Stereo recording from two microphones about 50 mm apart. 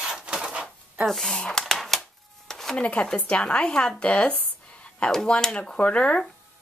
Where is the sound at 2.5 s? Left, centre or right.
Centre.